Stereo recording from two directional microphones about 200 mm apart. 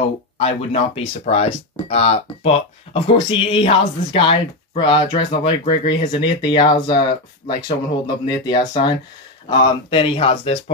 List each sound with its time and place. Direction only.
0.4 s speech: 30° left (ahead or behind)